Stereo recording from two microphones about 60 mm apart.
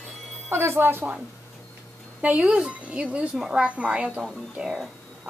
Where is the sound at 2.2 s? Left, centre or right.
Right.